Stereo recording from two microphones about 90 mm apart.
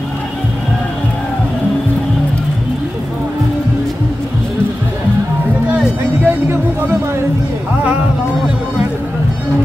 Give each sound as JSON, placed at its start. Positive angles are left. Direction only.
{"t": 6.2, "sound": "music", "side_deg": -25}